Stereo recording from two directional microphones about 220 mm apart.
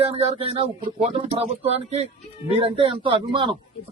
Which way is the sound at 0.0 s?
25° right (ahead or behind).